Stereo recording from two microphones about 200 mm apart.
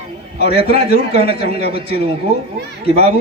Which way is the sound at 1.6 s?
50° left (ahead or behind).